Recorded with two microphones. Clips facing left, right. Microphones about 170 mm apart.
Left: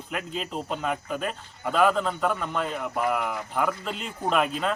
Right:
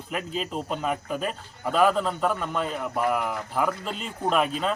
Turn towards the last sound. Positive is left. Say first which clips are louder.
# right 1 dB
turn(degrees=0)  # may be behind; listen again after turning